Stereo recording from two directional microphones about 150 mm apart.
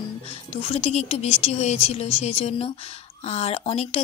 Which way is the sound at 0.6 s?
45° left (ahead or behind).